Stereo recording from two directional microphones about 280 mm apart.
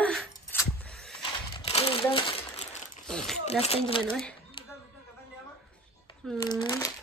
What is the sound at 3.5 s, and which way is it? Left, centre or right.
Speech, left.